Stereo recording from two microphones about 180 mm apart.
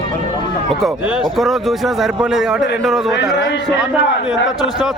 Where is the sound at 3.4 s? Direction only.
80° left.